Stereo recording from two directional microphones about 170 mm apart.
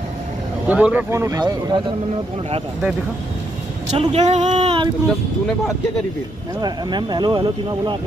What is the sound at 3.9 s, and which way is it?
Speech, 40° right (ahead or behind).